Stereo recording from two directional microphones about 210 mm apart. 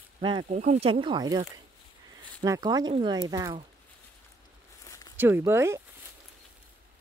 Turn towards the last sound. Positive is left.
turn(degrees=-10)  # may be behind; listen again after turning